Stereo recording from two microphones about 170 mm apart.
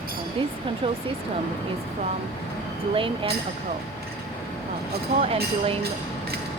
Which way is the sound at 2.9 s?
30° right (ahead or behind).